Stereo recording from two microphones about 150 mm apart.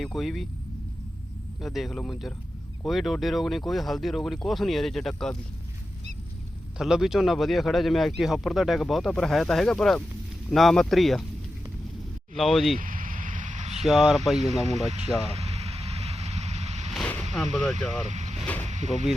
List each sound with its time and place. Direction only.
0.0 s speech: centre (ahead or behind)
1.6 s speech: centre (ahead or behind)
6.7 s speech: centre (ahead or behind)
12.4 s speech: centre (ahead or behind)
12.8 s vehicle: 65° right (ahead or behind); by 13.8 s 50° right (ahead or behind)
13.8 s speech: 5° right (ahead or behind)
14.8 s vehicle: 45° right (ahead or behind)
16.9 s a sound: 10° left (ahead or behind)
17.3 s speech: centre (ahead or behind)
17.7 s speech: 50° right (ahead or behind)
18.6 s a sound: 50° right (ahead or behind)